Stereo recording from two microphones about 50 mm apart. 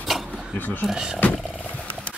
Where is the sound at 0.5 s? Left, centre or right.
Left.